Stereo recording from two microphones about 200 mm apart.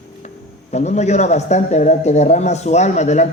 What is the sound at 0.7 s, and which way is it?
A man's voice, 35° left (ahead or behind).